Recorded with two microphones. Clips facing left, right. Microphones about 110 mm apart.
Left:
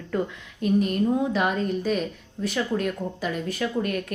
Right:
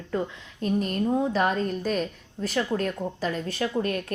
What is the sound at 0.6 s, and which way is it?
A woman's voice, 35° right (ahead or behind).